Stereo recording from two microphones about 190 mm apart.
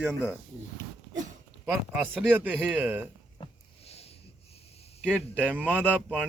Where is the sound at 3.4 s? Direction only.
30° left (ahead or behind).